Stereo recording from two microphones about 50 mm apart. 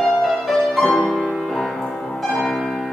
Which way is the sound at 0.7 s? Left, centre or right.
Centre.